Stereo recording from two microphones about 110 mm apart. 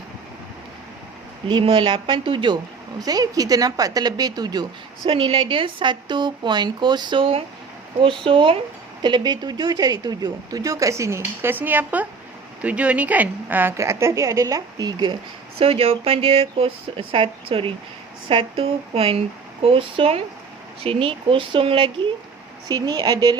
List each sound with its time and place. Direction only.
1.5 s a woman's voice: 50° right (ahead or behind)
3.0 s speech: 35° right (ahead or behind)
5.0 s a woman's voice: 55° right (ahead or behind)
15.5 s a woman's voice: 60° right (ahead or behind)
22.7 s speech: 35° right (ahead or behind)